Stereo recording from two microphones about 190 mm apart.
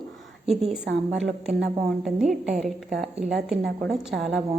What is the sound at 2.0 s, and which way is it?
A woman's voice, 5° right (ahead or behind).